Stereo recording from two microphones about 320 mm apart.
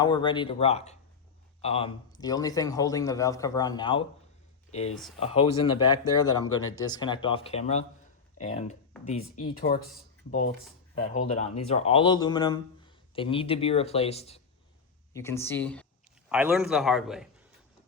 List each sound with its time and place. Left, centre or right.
0.0 s speech: centre
5.2 s speech: centre
11.0 s speech: left
15.1 s a man's voice: centre